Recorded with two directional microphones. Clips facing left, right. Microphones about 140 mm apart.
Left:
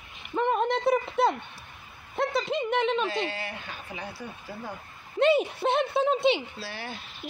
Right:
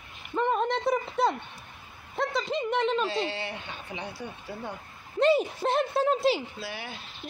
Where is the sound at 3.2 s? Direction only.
25° right (ahead or behind).